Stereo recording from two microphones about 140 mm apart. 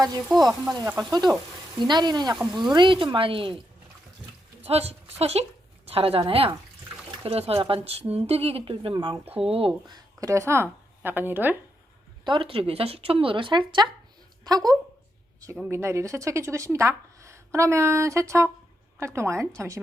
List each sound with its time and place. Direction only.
0.3 s frying: centre (ahead or behind)
0.9 s a woman's voice: 25° right (ahead or behind)
4.6 s a woman's voice: 45° right (ahead or behind); by 11.5 s 15° right (ahead or behind)
12.2 s a woman's voice: 35° right (ahead or behind); by 19.8 s 20° right (ahead or behind)